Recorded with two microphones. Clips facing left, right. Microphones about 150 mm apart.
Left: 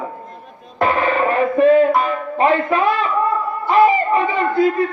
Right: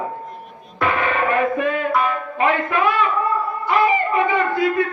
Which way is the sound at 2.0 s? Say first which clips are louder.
Left 2 dB; 35° left (ahead or behind).